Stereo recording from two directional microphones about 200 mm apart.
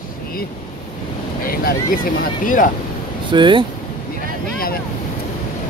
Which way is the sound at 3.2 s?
25° right (ahead or behind).